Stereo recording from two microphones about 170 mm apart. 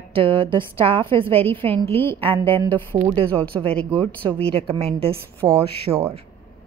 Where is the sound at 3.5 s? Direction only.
20° right (ahead or behind).